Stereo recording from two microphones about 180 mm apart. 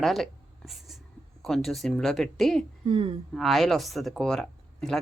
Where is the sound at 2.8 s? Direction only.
30° right (ahead or behind).